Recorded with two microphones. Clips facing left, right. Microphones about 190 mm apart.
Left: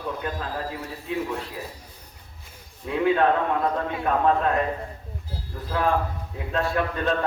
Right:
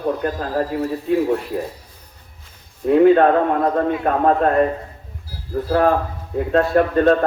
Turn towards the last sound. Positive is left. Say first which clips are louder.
# right 10 dB
turn(degrees=-50)  # may be behind; listen again after turning